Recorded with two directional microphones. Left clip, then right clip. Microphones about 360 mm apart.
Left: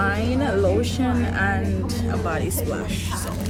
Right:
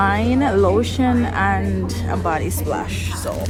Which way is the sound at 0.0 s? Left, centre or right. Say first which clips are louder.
Right 5 dB; centre.